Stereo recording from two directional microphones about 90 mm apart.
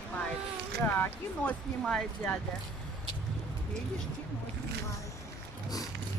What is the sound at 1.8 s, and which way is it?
Speech, 10° left (ahead or behind).